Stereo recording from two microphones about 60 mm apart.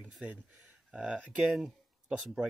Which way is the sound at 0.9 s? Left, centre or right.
Centre.